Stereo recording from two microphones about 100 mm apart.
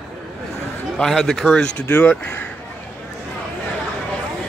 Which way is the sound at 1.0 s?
5° left (ahead or behind).